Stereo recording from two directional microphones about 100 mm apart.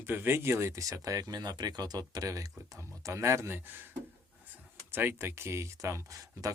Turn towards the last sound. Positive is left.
turn(degrees=-35)  # may be behind; listen again after turning